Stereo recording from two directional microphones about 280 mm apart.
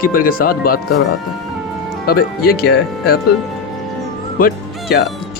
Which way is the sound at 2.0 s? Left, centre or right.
Left.